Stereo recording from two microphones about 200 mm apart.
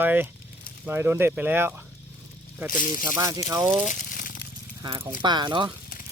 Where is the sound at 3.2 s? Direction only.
15° right (ahead or behind).